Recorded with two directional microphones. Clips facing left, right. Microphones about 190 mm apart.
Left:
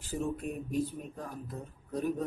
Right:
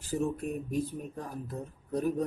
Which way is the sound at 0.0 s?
40° right (ahead or behind).